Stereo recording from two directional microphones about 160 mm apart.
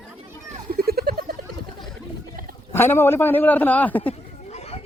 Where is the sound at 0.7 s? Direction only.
70° right (ahead or behind).